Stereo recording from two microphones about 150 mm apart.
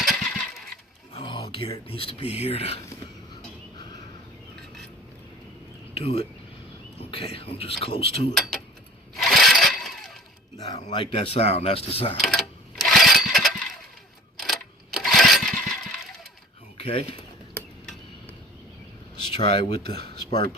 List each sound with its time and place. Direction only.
0.0 s vehicle: centre (ahead or behind)
1.1 s speech: 35° left (ahead or behind)
6.0 s speech: 45° left (ahead or behind)
9.1 s a sound: centre (ahead or behind)
10.7 s speech: 40° left (ahead or behind)
12.2 s a sound: centre (ahead or behind)
16.8 s speech: 40° left (ahead or behind)
19.2 s speech: 35° left (ahead or behind)
19.9 s speech: 90° right